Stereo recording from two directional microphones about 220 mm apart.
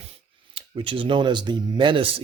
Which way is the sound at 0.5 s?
25° right (ahead or behind).